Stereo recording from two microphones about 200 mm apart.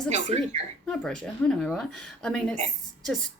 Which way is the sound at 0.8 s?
5° left (ahead or behind).